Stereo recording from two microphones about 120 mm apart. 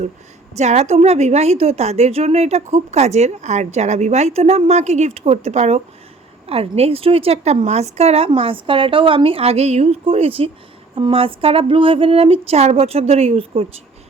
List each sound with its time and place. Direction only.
0.5 s a woman's voice: 70° right (ahead or behind)
8.3 s a woman's voice: 50° right (ahead or behind)